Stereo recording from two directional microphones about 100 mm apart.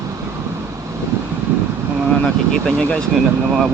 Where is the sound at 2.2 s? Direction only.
10° left (ahead or behind).